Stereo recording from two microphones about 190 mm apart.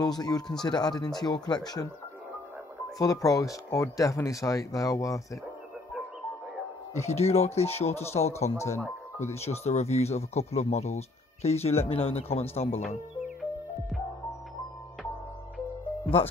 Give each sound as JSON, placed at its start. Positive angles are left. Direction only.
{"t": 0.0, "sound": "speech", "side_deg": 20}
{"t": 3.0, "sound": "speech", "side_deg": 20}
{"t": 7.1, "sound": "speech", "side_deg": 35}
{"t": 8.5, "sound": "speech", "side_deg": 15}
{"t": 9.2, "sound": "speech", "side_deg": 35}
{"t": 13.4, "sound": "music", "side_deg": 0}